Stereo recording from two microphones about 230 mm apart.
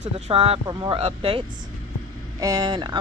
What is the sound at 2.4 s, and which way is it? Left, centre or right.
Speech, centre.